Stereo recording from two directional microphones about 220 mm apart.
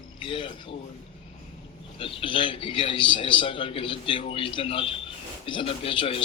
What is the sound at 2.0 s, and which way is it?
Speech, 25° left (ahead or behind).